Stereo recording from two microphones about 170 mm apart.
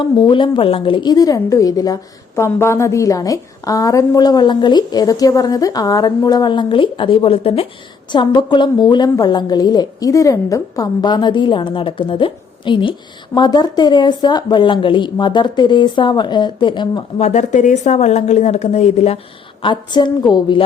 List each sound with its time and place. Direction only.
0.0 s a woman's voice: 30° left (ahead or behind)
17.2 s a woman's voice: 40° left (ahead or behind)
19.6 s a woman's voice: 25° left (ahead or behind)